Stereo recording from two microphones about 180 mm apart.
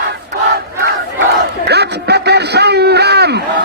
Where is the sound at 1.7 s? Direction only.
65° right (ahead or behind).